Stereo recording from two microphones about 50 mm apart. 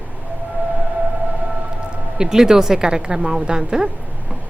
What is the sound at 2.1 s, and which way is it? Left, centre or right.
A woman's voice, centre.